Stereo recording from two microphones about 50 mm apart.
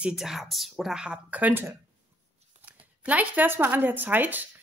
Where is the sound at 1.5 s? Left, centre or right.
Right.